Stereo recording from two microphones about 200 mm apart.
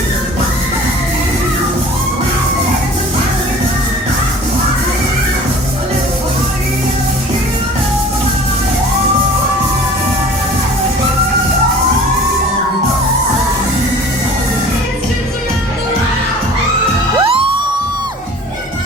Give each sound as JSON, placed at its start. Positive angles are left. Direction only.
{"t": 17.2, "sound": "music", "side_deg": -25}